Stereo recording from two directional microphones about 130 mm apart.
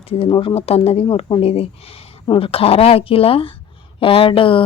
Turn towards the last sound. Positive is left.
turn(degrees=40)  # may be behind; listen again after turning